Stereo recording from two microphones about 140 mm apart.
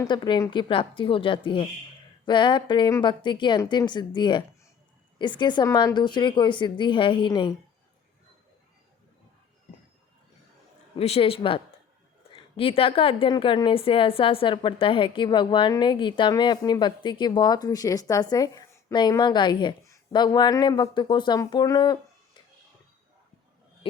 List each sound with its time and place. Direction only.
0.1 s a woman's voice: 35° left (ahead or behind)
10.9 s a woman's voice: 45° left (ahead or behind)